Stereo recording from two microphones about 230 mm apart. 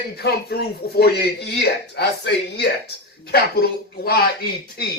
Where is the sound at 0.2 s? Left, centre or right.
Left.